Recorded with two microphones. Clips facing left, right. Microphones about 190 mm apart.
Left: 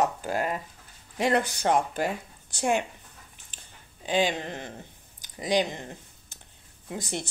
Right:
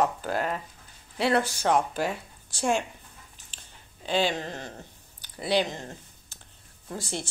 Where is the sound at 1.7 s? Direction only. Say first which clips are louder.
Even; 55° left (ahead or behind).